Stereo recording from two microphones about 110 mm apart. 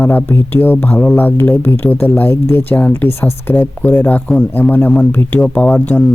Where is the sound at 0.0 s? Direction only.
20° left (ahead or behind).